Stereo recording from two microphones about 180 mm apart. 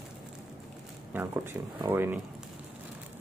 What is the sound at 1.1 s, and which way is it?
A man's voice, 10° right (ahead or behind).